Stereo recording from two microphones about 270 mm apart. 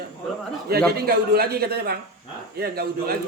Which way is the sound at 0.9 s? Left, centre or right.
Right.